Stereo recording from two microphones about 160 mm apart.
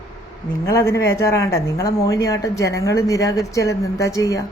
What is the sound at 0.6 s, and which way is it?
Speech, 20° left (ahead or behind).